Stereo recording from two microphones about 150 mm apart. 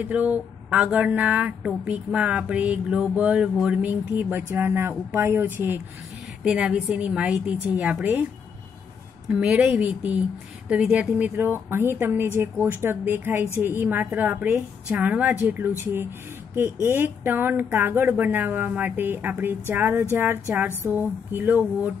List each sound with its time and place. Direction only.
0.0 s speech: 10° right (ahead or behind)
9.3 s speech: 10° right (ahead or behind)